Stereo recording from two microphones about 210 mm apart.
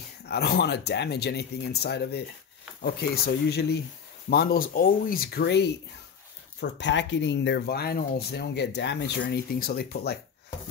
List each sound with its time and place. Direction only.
0.3 s speech: 50° left (ahead or behind)